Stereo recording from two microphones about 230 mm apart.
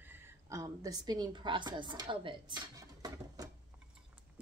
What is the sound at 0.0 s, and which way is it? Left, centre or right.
A woman's voice, centre.